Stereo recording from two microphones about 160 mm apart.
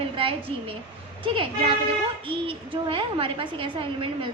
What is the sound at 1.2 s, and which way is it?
A woman's voice, 35° right (ahead or behind).